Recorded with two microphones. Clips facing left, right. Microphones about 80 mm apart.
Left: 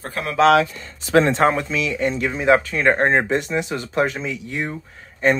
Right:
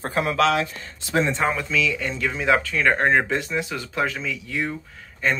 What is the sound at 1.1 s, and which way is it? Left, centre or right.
Speech, left.